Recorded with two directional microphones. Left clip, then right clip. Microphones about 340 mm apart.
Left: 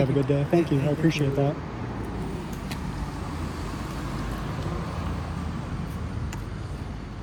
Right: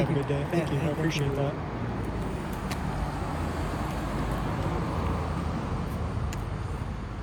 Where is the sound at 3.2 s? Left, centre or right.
Right.